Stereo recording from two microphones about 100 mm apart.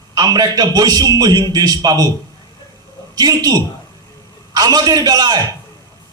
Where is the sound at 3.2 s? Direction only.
40° right (ahead or behind).